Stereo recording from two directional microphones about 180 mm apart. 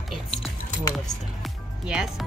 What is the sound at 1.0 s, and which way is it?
Music, centre (ahead or behind).